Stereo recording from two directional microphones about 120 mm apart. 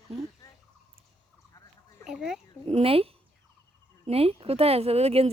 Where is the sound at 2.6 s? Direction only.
55° right (ahead or behind).